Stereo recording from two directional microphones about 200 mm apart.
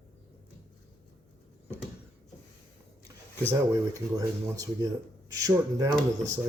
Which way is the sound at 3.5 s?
15° right (ahead or behind).